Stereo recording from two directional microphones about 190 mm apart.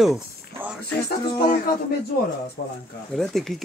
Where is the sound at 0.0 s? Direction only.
5° right (ahead or behind).